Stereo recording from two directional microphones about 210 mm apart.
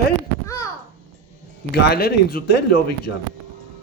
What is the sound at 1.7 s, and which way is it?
Speech, 45° left (ahead or behind).